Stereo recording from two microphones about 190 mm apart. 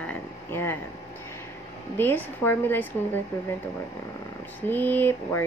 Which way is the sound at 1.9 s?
10° left (ahead or behind).